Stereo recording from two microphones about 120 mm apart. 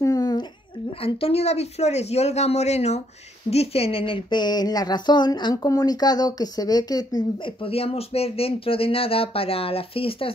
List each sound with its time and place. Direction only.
0.0 s a sound: 30° left (ahead or behind)
1.0 s speech: 55° left (ahead or behind); by 7.5 s 35° left (ahead or behind)
7.6 s speech: 55° left (ahead or behind)